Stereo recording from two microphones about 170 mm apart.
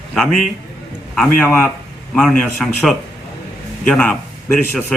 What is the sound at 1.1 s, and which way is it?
Speech, 10° left (ahead or behind).